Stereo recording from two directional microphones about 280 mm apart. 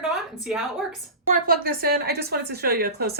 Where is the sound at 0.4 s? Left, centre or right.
Centre.